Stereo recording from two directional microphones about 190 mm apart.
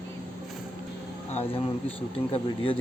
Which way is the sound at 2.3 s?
30° left (ahead or behind).